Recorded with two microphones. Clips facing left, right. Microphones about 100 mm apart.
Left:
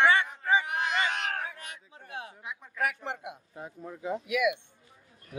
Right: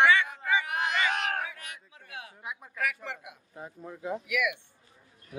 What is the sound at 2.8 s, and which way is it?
Speech, 30° left (ahead or behind).